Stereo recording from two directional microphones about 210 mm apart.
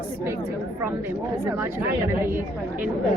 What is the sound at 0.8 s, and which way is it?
Speech, 10° right (ahead or behind).